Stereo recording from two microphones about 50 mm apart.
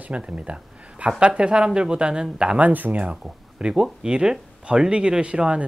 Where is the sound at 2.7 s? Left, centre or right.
Right.